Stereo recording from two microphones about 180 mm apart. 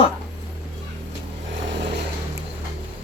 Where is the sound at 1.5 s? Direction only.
90° right.